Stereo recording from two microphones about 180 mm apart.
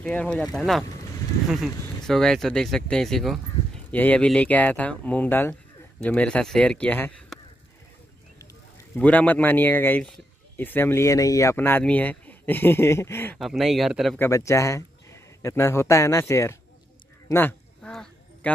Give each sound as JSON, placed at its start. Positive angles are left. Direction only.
{"t": 0.0, "sound": "speech", "side_deg": 5}
{"t": 2.0, "sound": "speech", "side_deg": 0}
{"t": 8.7, "sound": "speech", "side_deg": 10}
{"t": 13.4, "sound": "speech", "side_deg": 0}
{"t": 14.1, "sound": "speech", "side_deg": 15}
{"t": 17.3, "sound": "a sound", "side_deg": 10}